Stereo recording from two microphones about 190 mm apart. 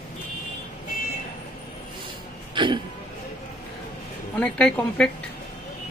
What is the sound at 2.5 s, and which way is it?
Throat clearing, 25° right (ahead or behind).